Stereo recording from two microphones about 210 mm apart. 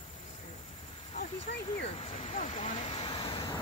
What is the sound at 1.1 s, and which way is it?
Speech, 30° left (ahead or behind).